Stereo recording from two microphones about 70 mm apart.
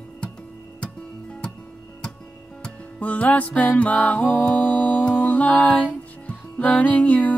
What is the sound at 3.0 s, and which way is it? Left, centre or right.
Music, left.